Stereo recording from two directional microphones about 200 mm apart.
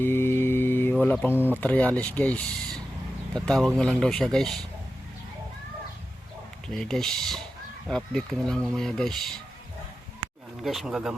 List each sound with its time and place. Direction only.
0.0 s mantra: 10° left (ahead or behind)
1.0 s speech: 10° left (ahead or behind)
6.7 s speech: centre (ahead or behind)
10.6 s speech: centre (ahead or behind)